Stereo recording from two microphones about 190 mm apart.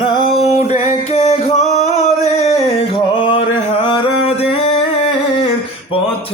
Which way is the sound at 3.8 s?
25° left (ahead or behind).